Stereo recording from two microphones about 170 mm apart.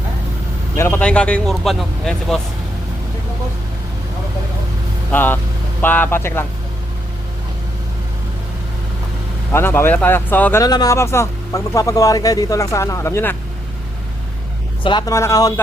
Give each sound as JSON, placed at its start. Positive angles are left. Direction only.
{"t": 0.8, "sound": "speech", "side_deg": 10}
{"t": 5.1, "sound": "speech", "side_deg": 10}
{"t": 9.5, "sound": "speech", "side_deg": 15}
{"t": 10.6, "sound": "speech", "side_deg": 20}
{"t": 14.8, "sound": "speech", "side_deg": 25}